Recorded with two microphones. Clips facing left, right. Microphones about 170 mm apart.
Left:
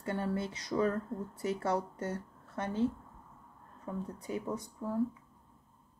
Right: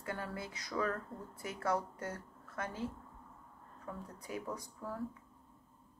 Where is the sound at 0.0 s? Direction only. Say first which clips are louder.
Left 7 dB; 25° left (ahead or behind).